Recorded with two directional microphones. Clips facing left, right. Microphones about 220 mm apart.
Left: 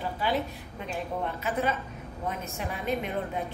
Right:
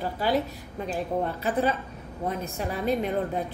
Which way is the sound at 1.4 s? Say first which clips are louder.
Right 2 dB; 35° right (ahead or behind).